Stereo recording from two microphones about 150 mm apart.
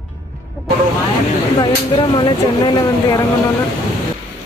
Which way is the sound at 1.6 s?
30° left (ahead or behind).